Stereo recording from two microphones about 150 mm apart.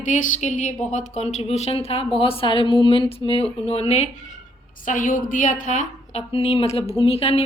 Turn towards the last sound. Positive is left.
turn(degrees=45)  # may be behind; listen again after turning